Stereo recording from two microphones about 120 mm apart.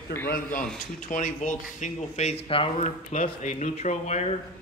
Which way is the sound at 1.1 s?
90° left.